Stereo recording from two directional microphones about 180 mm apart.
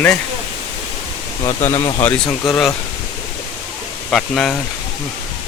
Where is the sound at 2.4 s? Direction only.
Centre (ahead or behind).